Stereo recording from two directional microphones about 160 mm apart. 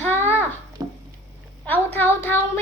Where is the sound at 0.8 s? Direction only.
20° right (ahead or behind).